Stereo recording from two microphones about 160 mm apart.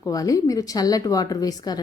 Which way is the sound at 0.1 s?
20° left (ahead or behind).